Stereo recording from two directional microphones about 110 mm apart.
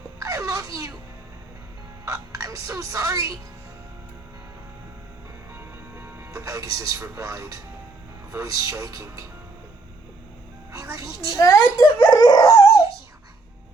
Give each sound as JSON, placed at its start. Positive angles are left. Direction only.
{"t": 0.2, "sound": "wail", "side_deg": -30}
{"t": 2.0, "sound": "music", "side_deg": -30}
{"t": 5.5, "sound": "speech", "side_deg": -20}
{"t": 10.7, "sound": "speech", "side_deg": -30}
{"t": 11.3, "sound": "a child's voice", "side_deg": 30}